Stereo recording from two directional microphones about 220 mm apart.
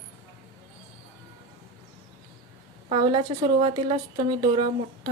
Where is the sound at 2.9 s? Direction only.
25° right (ahead or behind).